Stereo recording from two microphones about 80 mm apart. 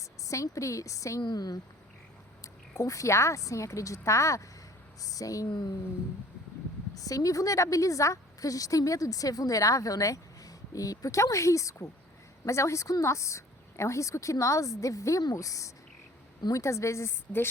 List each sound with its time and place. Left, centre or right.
0.0 s a woman's voice: left
1.2 s speech: left
2.4 s a woman's voice: left
5.5 s speech: left
6.9 s a woman's voice: left